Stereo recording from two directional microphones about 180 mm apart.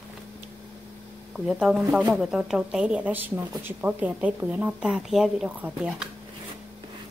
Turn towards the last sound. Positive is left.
turn(degrees=-5)  # may be behind; listen again after turning